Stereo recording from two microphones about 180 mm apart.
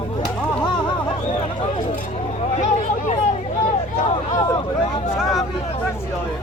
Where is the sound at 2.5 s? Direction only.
40° left (ahead or behind).